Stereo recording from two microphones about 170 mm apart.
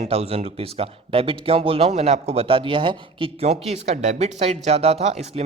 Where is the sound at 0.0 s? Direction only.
35° right (ahead or behind).